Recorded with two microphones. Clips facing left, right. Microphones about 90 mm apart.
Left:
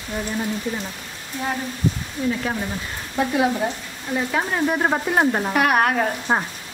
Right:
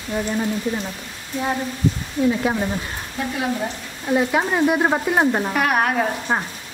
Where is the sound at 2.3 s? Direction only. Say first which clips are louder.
Right 4 dB; 20° right (ahead or behind).